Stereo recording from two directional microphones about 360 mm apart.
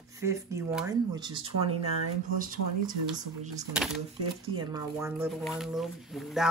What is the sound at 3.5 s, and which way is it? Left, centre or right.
Speech, centre.